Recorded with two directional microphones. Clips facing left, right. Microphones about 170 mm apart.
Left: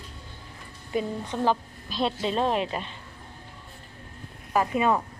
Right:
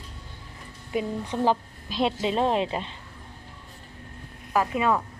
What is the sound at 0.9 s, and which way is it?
A woman's voice, 10° right (ahead or behind).